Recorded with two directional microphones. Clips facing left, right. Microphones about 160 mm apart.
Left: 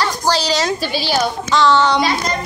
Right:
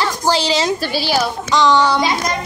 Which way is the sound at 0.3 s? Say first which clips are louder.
Right 2 dB; 20° right (ahead or behind).